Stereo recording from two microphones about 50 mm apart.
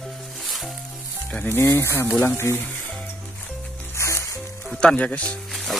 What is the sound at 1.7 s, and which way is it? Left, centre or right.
Speech, left.